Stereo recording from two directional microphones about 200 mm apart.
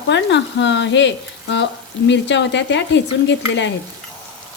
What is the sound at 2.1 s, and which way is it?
Frying, 60° left (ahead or behind).